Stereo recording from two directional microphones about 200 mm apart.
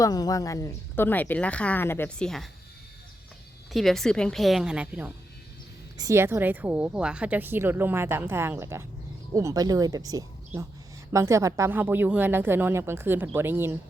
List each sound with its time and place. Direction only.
0.0 s speech: 20° left (ahead or behind); by 2.5 s 5° left (ahead or behind)
3.7 s a woman's voice: centre (ahead or behind)